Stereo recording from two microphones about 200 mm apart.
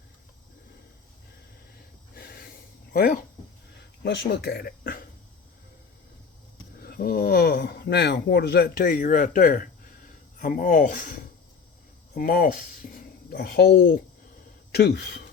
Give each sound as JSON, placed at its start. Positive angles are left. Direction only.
{"t": 2.1, "sound": "hiss", "side_deg": 50}
{"t": 2.9, "sound": "speech", "side_deg": 50}
{"t": 6.7, "sound": "speech", "side_deg": 50}
{"t": 12.1, "sound": "speech", "side_deg": 50}